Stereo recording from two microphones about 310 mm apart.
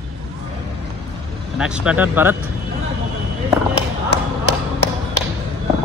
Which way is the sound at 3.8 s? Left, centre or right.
Left.